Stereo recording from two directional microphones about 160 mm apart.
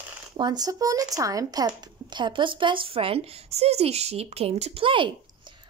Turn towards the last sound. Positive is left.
turn(degrees=-30)  # may be behind; listen again after turning